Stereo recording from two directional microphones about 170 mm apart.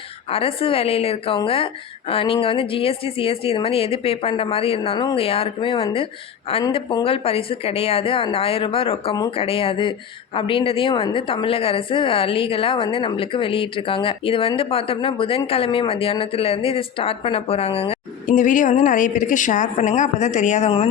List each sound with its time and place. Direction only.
0.3 s a woman's voice: 35° left (ahead or behind)
18.3 s a woman's voice: 50° left (ahead or behind)